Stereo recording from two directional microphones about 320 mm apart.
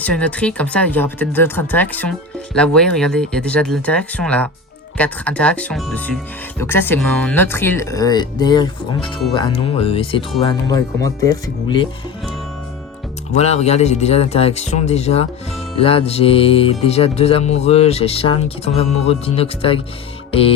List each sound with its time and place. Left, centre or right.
0.0 s speech: centre
6.6 s music: centre
13.3 s speech: centre
15.8 s music: centre